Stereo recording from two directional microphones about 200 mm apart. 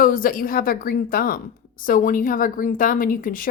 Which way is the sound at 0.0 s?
45° left (ahead or behind).